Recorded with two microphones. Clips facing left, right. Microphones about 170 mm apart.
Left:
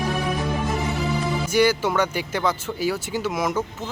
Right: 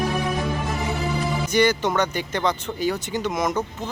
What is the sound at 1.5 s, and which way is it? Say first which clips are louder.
Speech: even; 10° left (ahead or behind).